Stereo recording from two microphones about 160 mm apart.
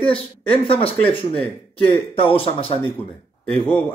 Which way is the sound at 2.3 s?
35° left (ahead or behind).